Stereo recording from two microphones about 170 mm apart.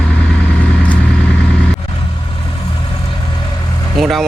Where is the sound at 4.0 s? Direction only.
Centre (ahead or behind).